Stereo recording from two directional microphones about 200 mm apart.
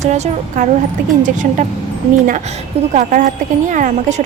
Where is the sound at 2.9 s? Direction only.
40° right (ahead or behind).